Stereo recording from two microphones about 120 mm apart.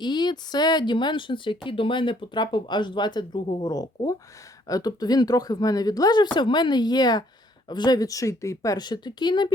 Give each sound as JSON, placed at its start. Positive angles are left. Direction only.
{"t": 0.0, "sound": "speech", "side_deg": 35}